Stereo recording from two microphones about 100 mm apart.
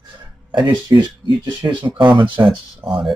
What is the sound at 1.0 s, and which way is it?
Speech, 50° right (ahead or behind).